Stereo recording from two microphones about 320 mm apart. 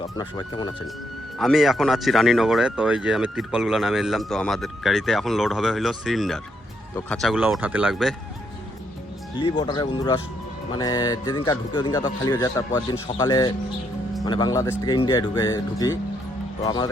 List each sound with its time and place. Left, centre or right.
0.2 s speech: centre
1.4 s speech: centre
9.4 s speech: centre